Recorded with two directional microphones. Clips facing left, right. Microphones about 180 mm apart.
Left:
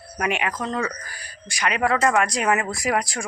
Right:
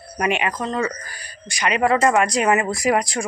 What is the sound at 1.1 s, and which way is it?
Speech, 5° left (ahead or behind).